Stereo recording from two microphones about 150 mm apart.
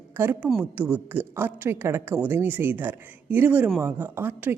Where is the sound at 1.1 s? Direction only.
15° right (ahead or behind).